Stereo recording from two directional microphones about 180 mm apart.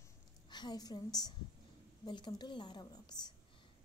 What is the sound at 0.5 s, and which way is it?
A woman's voice, 25° left (ahead or behind).